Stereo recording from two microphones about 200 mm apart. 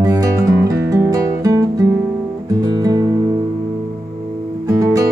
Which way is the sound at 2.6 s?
20° right (ahead or behind).